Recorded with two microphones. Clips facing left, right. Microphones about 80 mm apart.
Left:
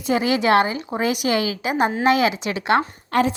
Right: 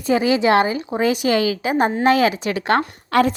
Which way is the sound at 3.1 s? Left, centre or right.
Right.